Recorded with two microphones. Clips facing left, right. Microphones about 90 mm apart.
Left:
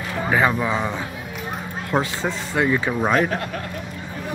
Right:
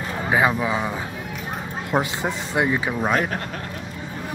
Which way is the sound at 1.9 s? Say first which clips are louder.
Even; 20° right (ahead or behind).